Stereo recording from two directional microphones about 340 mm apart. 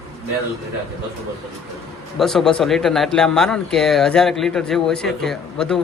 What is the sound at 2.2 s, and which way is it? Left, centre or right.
Speech, centre.